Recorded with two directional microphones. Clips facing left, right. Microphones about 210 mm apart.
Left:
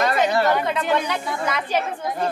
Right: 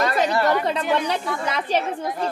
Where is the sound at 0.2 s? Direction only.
35° right (ahead or behind).